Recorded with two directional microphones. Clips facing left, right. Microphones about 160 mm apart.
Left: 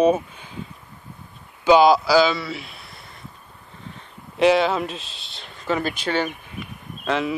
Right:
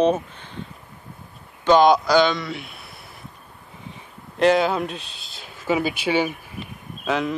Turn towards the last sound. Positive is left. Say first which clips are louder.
# even
turn(degrees=0)  # may be behind; listen again after turning